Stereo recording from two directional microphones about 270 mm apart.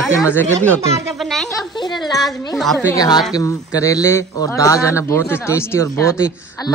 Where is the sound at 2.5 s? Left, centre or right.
Centre.